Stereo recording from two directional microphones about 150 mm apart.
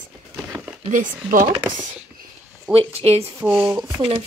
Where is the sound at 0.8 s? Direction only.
60° right (ahead or behind).